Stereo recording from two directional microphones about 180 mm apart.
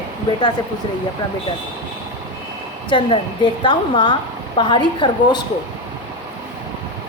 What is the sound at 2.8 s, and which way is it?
Speech, 25° left (ahead or behind).